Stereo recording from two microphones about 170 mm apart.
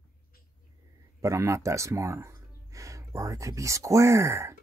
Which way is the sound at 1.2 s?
15° right (ahead or behind).